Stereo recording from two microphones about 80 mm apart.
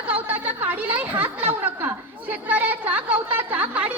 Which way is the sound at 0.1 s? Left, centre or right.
Right.